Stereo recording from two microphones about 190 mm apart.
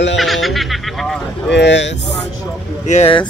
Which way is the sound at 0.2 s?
Centre (ahead or behind).